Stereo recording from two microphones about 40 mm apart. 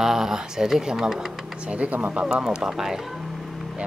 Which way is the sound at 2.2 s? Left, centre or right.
Centre.